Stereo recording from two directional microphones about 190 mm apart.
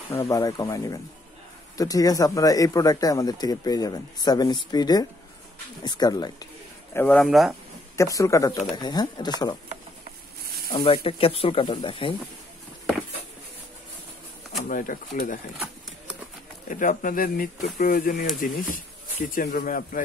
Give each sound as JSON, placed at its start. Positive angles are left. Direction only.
{"t": 0.1, "sound": "speech", "side_deg": 15}
{"t": 7.2, "sound": "speech", "side_deg": 0}
{"t": 8.0, "sound": "speech", "side_deg": 15}
{"t": 10.4, "sound": "snake", "side_deg": -55}
{"t": 10.7, "sound": "speech", "side_deg": 25}
{"t": 14.6, "sound": "speech", "side_deg": 45}
{"t": 16.6, "sound": "speech", "side_deg": 45}